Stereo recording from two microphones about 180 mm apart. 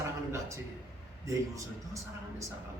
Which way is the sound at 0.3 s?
15° right (ahead or behind).